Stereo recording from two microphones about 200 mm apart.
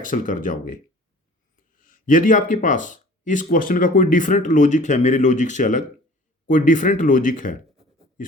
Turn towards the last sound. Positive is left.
turn(degrees=40)  # may be behind; listen again after turning